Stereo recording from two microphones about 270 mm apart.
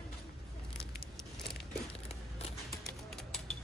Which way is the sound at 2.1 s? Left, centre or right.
Left.